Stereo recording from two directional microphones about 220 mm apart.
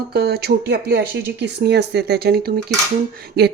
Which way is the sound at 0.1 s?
45° right (ahead or behind).